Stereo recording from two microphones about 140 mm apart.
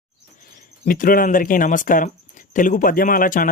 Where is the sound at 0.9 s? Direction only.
85° left.